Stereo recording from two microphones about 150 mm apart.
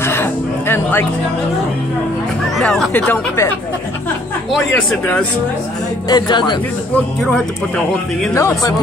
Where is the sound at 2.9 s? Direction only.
10° left (ahead or behind).